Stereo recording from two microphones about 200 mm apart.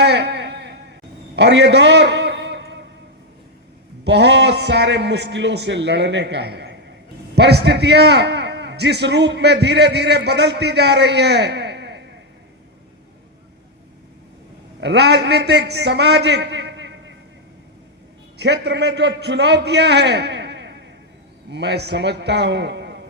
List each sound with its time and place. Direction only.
0.0 s a sound: 55° right (ahead or behind)
4.0 s a man's voice: 60° right (ahead or behind)
14.8 s a man's voice: 60° right (ahead or behind)
18.3 s a man's voice: 55° right (ahead or behind)